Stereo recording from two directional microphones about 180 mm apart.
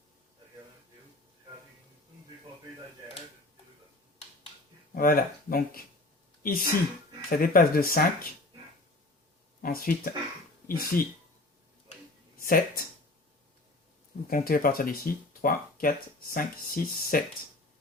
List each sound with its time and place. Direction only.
4.9 s speech: 55° left (ahead or behind)
9.6 s speech: 55° left (ahead or behind)
12.4 s speech: 50° left (ahead or behind)
14.3 s speech: 55° left (ahead or behind)